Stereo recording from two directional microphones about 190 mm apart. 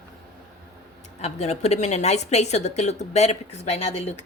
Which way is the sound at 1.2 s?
35° left (ahead or behind).